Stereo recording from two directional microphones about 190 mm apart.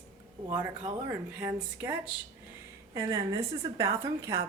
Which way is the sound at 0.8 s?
15° right (ahead or behind).